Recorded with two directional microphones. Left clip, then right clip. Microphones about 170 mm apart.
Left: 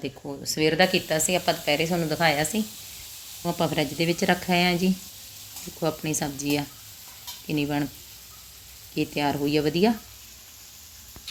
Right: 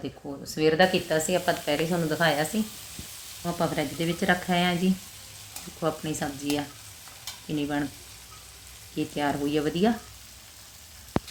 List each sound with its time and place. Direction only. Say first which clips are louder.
0.0 s speech: left 3 dB; 10° left (ahead or behind)
3.4 s sizzle: left 2 dB; 20° left (ahead or behind)
5.8 s speech: left 2 dB; 15° left (ahead or behind)
7.4 s stir: left 2 dB; 15° left (ahead or behind)
9.0 s speech: left 2 dB; 15° left (ahead or behind)